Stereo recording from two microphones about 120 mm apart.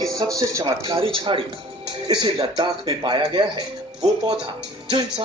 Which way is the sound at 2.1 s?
35° right (ahead or behind).